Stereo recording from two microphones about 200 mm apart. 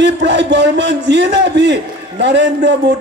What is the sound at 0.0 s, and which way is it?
A woman's voice, 60° right (ahead or behind).